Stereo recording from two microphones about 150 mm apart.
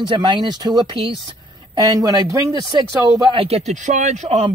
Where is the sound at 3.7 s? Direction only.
55° right (ahead or behind).